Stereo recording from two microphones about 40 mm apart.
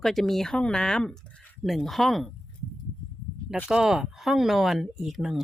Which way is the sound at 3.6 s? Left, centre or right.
Centre.